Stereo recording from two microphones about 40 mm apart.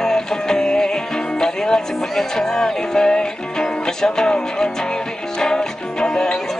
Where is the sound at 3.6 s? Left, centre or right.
Centre.